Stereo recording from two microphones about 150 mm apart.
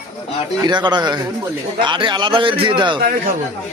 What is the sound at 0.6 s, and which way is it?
A man's voice, 30° right (ahead or behind).